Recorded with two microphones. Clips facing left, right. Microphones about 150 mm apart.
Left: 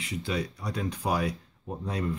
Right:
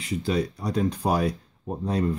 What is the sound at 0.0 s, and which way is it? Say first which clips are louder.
Speech: right 6 dB; 40° right (ahead or behind).